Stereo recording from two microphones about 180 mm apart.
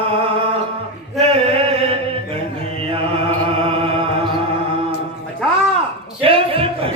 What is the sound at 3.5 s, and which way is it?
Music, 30° right (ahead or behind).